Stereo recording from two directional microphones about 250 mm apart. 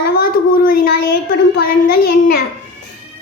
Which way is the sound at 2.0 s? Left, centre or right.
Left.